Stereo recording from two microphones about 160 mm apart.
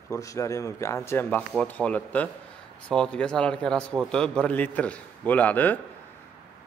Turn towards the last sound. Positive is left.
turn(degrees=10)  # may be behind; listen again after turning